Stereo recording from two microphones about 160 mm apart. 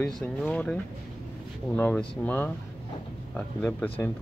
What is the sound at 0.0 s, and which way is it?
Speech, 5° left (ahead or behind).